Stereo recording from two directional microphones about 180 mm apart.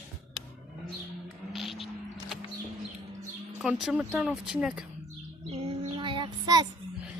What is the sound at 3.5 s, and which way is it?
Speech, 5° right (ahead or behind).